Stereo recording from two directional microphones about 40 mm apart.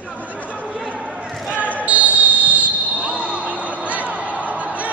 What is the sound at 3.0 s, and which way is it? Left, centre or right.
Basketball bounce, right.